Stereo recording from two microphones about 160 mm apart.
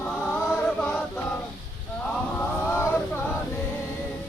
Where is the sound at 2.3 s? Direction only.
15° left (ahead or behind).